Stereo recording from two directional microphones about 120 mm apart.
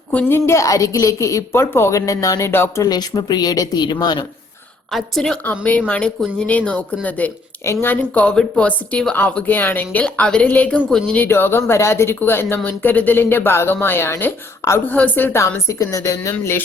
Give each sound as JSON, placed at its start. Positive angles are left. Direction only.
{"t": 0.1, "sound": "a woman's voice", "side_deg": 15}
{"t": 2.8, "sound": "a woman's voice", "side_deg": 35}
{"t": 4.9, "sound": "a woman's voice", "side_deg": 0}
{"t": 5.5, "sound": "a woman's voice", "side_deg": 15}